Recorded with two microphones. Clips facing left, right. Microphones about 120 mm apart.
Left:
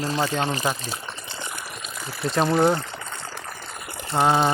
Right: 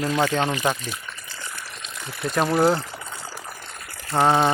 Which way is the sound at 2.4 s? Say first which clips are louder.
Even; 5° right (ahead or behind).